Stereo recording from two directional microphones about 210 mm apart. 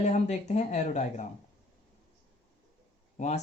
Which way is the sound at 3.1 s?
35° left (ahead or behind).